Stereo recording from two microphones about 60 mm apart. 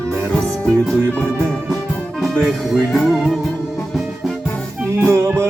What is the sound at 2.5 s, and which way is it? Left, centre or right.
Music, centre.